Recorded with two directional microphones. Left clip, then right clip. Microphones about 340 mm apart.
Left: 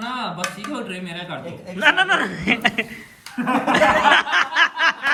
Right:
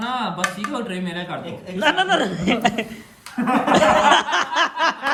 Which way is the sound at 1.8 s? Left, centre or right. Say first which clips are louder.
Left 1 dB; centre.